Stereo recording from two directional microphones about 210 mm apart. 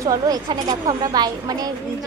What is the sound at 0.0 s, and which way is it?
A woman's voice, 15° right (ahead or behind).